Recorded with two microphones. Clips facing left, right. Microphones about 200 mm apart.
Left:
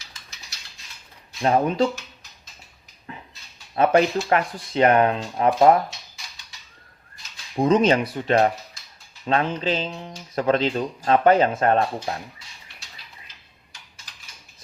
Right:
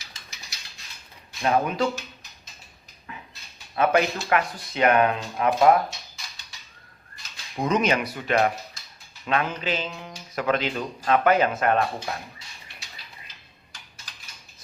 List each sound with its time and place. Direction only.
1.4 s speech: 30° left (ahead or behind)
3.1 s a sound: 30° left (ahead or behind)
3.8 s speech: 30° left (ahead or behind)
7.5 s speech: 30° left (ahead or behind)